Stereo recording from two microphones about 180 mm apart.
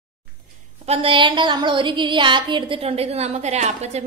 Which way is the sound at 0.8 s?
30° right (ahead or behind).